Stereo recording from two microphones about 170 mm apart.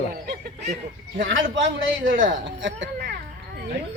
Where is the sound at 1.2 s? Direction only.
90° right.